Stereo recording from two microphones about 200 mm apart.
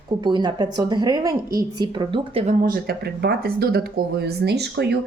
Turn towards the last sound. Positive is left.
turn(degrees=-55)  # may be behind; listen again after turning